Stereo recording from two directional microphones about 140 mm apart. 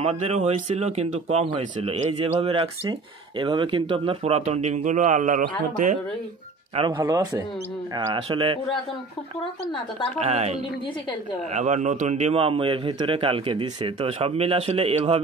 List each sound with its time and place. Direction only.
0.0 s speech: 50° right (ahead or behind)
6.9 s a man's voice: 25° right (ahead or behind)
10.2 s speech: 50° right (ahead or behind)